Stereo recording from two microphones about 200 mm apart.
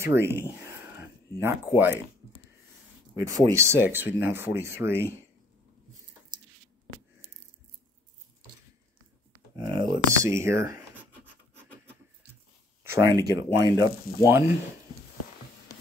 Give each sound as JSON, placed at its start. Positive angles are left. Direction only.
{"t": 0.0, "sound": "speech", "side_deg": -10}
{"t": 3.3, "sound": "speech", "side_deg": -15}
{"t": 9.6, "sound": "speech", "side_deg": -20}
{"t": 12.9, "sound": "speech", "side_deg": -20}